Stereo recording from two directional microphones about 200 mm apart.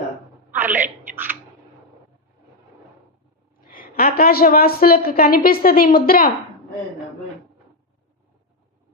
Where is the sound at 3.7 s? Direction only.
45° left (ahead or behind).